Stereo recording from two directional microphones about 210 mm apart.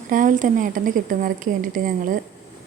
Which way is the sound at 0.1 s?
40° right (ahead or behind).